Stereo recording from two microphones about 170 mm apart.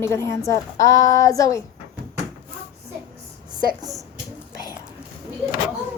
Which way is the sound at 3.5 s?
25° right (ahead or behind).